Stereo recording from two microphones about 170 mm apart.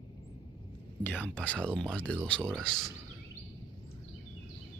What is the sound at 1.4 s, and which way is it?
Speech, 5° left (ahead or behind).